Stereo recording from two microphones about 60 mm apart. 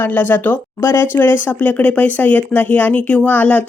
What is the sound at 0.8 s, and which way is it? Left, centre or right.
Speech, left.